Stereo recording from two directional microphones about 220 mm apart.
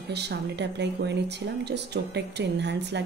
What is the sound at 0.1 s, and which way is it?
Speech, 50° right (ahead or behind).